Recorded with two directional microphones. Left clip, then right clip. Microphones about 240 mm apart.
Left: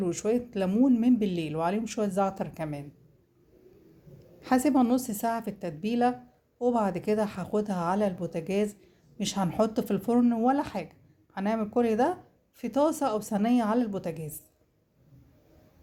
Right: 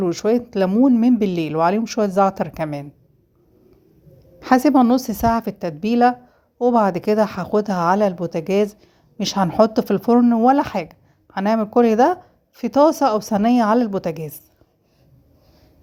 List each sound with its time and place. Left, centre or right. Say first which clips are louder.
0.0 s speech: right 9 dB; right
4.4 s speech: right 10 dB; right